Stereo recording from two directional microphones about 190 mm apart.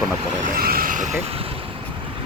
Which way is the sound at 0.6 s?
50° right (ahead or behind).